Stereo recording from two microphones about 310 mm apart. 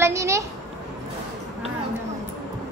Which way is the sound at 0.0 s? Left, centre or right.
Centre.